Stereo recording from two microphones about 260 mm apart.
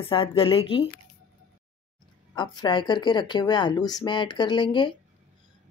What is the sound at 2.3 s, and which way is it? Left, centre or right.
Speech, centre.